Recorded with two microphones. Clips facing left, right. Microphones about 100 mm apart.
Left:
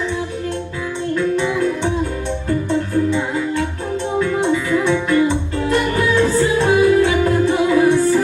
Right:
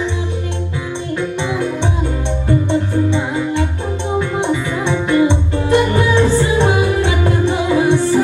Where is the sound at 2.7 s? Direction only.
20° right (ahead or behind).